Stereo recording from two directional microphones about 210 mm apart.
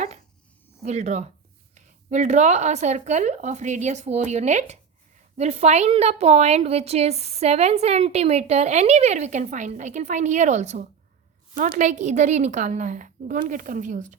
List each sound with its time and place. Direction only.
0.8 s a woman's voice: 30° right (ahead or behind)